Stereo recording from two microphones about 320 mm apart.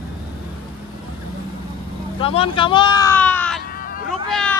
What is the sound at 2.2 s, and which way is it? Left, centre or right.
Speech, centre.